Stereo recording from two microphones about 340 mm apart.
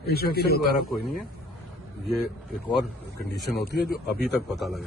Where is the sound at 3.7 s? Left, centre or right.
Centre.